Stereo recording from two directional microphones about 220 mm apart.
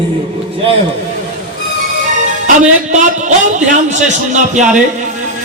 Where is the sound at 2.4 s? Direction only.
35° right (ahead or behind).